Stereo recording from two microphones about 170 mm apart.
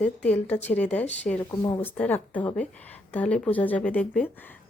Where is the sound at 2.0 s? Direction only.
10° left (ahead or behind).